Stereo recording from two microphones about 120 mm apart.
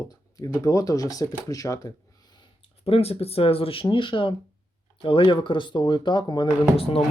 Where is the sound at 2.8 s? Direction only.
55° left (ahead or behind); by 6.5 s 40° left (ahead or behind).